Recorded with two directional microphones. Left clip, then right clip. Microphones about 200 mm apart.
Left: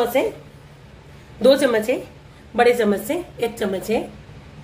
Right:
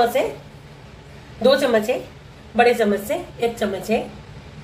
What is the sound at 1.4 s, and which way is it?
A woman's voice, 55° left (ahead or behind).